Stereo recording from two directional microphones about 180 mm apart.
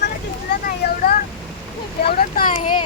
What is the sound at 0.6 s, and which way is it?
Vehicle, 50° left (ahead or behind).